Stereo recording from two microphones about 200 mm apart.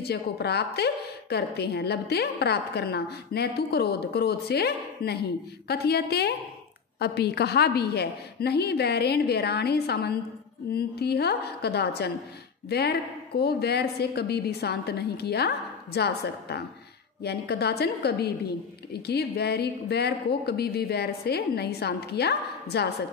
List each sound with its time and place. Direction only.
0.0 s a woman's voice: 55° left (ahead or behind)